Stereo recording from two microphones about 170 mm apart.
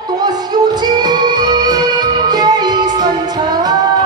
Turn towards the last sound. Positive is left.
turn(degrees=-25)  # may be behind; listen again after turning